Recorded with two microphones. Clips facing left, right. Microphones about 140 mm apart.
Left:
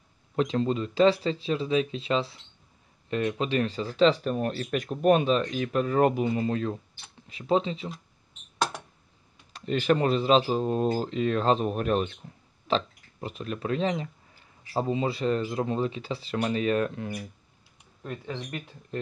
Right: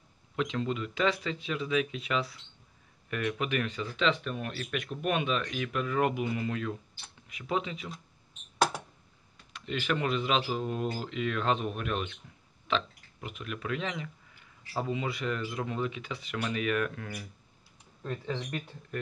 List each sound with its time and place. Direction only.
0.4 s speech: 35° left (ahead or behind)
8.5 s a sound: centre (ahead or behind)
9.5 s speech: 35° left (ahead or behind); by 17.3 s 20° left (ahead or behind)